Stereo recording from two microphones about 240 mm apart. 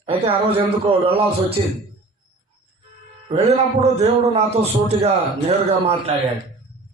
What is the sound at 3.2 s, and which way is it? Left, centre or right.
A man's voice, right.